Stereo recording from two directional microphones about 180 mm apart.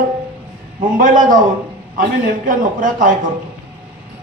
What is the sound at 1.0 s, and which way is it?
Speech, 50° right (ahead or behind).